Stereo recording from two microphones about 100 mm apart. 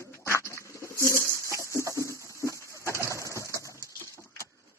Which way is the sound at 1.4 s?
30° right (ahead or behind).